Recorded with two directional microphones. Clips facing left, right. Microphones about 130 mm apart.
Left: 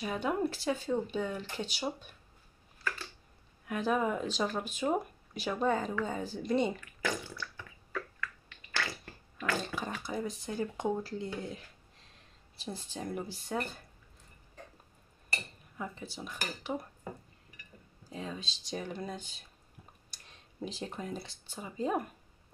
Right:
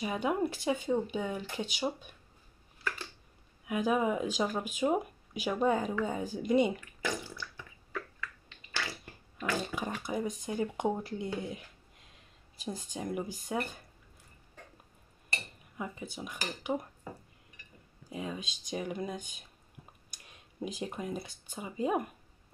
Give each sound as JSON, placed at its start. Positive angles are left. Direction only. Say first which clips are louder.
{"t": 0.0, "sound": "speech", "louder": "right 1 dB", "side_deg": -10}
{"t": 3.6, "sound": "speech", "louder": "right 2 dB", "side_deg": -10}
{"t": 6.3, "sound": "a sound", "louder": "right 4 dB", "side_deg": -10}
{"t": 9.4, "sound": "speech", "louder": "right 1 dB", "side_deg": -15}
{"t": 12.6, "sound": "speech", "louder": "right 2 dB", "side_deg": -15}
{"t": 15.8, "sound": "speech", "louder": "right 1 dB", "side_deg": -10}
{"t": 18.1, "sound": "speech", "louder": "right 2 dB", "side_deg": -10}
{"t": 20.8, "sound": "speech", "louder": "right 3 dB", "side_deg": -10}